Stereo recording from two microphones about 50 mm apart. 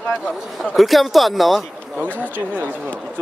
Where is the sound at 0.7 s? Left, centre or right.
Centre.